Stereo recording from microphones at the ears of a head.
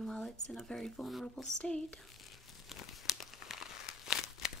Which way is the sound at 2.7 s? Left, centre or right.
Left.